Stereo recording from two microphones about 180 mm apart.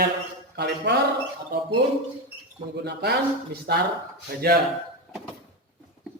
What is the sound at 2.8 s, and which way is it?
Speech, 70° right (ahead or behind).